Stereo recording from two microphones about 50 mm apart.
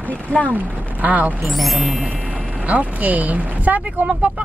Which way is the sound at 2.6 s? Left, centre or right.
Right.